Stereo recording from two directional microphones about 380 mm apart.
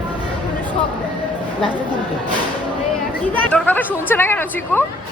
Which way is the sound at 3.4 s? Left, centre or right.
Centre.